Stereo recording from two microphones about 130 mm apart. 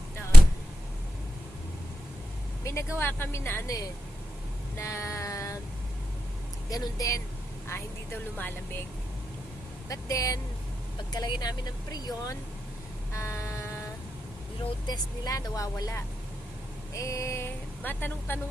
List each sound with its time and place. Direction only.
2.6 s speech: 20° left (ahead or behind)
4.8 s a sound: 25° left (ahead or behind)
6.7 s speech: 25° left (ahead or behind)
7.7 s speech: 15° left (ahead or behind)
9.9 s speech: 25° left (ahead or behind)
13.1 s vehicle: 20° left (ahead or behind)
14.8 s speech: 30° left (ahead or behind)